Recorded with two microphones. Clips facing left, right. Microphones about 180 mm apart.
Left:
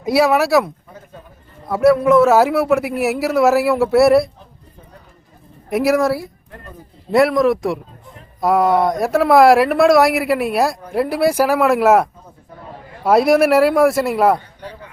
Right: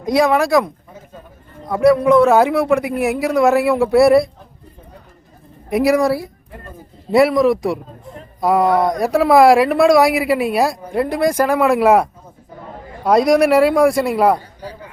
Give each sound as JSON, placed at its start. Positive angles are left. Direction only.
{"t": 0.0, "sound": "speech", "side_deg": 5}
{"t": 1.7, "sound": "speech", "side_deg": 5}
{"t": 5.6, "sound": "speech", "side_deg": 0}
{"t": 13.1, "sound": "speech", "side_deg": 5}